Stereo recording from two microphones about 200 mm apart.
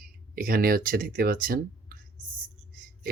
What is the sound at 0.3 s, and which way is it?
Speech, 45° right (ahead or behind).